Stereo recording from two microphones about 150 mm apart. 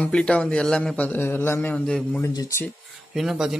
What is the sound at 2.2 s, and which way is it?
Speech, 25° left (ahead or behind).